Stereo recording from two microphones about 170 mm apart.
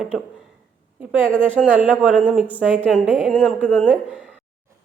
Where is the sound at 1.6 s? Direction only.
5° right (ahead or behind).